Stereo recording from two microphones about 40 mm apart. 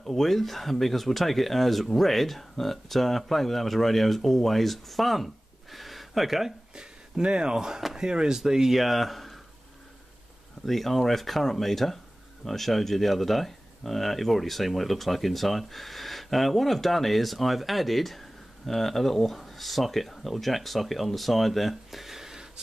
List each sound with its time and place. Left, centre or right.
0.0 s speech: centre
6.7 s speech: right; by 9.4 s centre
10.6 s speech: centre